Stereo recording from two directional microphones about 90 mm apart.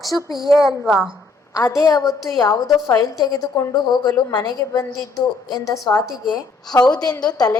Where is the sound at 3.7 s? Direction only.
55° left (ahead or behind).